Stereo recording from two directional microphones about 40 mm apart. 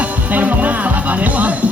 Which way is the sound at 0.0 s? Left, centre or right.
Right.